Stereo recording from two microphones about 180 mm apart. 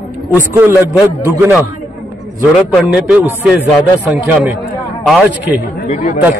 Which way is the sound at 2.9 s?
10° right (ahead or behind).